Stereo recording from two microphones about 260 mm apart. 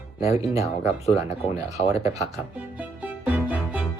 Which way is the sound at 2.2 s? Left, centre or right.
Centre.